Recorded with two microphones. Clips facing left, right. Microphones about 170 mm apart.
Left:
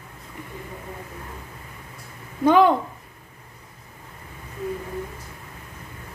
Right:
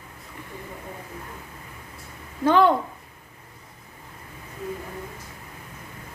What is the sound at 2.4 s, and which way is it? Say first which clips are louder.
Speech: left 2 dB; 15° left (ahead or behind).